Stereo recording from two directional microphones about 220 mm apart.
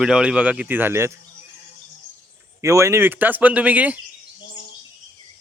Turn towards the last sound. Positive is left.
turn(degrees=-5)  # may be behind; listen again after turning